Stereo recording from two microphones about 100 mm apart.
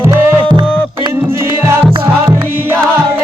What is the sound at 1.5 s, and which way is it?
Music, 25° right (ahead or behind).